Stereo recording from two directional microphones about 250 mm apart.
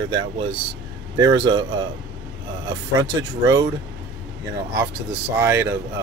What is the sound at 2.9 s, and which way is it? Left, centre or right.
Speech, centre.